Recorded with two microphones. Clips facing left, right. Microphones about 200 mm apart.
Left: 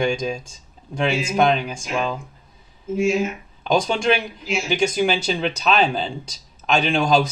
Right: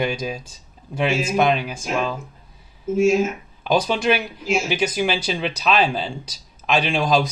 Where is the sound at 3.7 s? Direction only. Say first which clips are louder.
Even; 5° right (ahead or behind).